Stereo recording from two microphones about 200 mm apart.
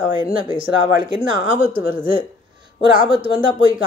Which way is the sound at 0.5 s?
25° right (ahead or behind).